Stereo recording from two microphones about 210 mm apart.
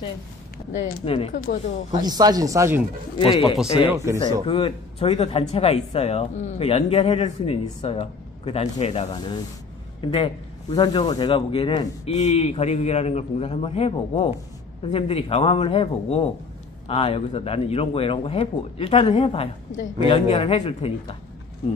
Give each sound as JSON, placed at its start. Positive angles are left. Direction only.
{"t": 0.7, "sound": "a man's voice", "side_deg": 30}
{"t": 2.0, "sound": "speech", "side_deg": -20}
{"t": 3.2, "sound": "speech", "side_deg": 25}
{"t": 3.9, "sound": "speech", "side_deg": -15}
{"t": 4.5, "sound": "speech", "side_deg": 25}
{"t": 12.0, "sound": "a man's voice", "side_deg": 35}